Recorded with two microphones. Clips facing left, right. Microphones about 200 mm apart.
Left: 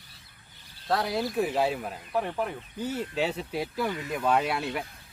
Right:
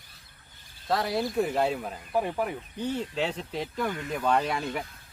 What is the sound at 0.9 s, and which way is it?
Speech, centre (ahead or behind).